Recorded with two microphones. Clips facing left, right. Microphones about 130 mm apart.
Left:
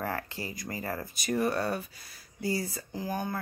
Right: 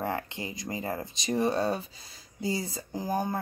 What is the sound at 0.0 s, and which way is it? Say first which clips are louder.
Speech: right 2 dB; 20° right (ahead or behind).